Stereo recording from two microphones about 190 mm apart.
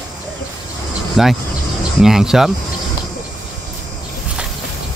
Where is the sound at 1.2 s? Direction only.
Centre (ahead or behind).